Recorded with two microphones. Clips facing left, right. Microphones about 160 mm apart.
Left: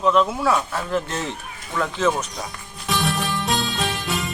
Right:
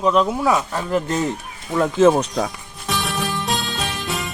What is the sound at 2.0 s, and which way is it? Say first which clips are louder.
Speech: right 8 dB; 30° right (ahead or behind).